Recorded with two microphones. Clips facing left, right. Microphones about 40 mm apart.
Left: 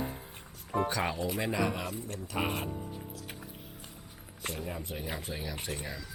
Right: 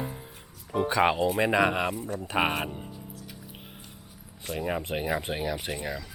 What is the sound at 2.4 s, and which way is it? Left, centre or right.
Speech, right.